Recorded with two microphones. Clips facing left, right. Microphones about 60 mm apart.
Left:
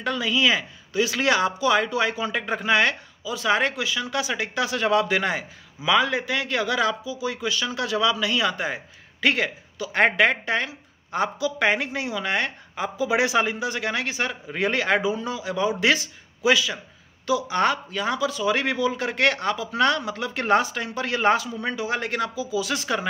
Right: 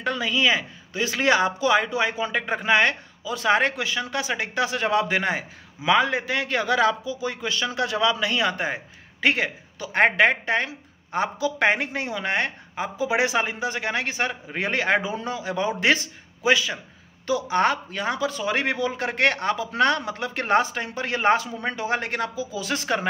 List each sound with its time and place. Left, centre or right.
0.0 s speech: right
3.3 s a man's voice: right